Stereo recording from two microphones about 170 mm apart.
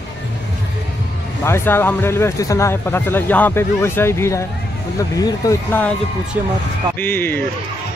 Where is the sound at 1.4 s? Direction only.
15° left (ahead or behind).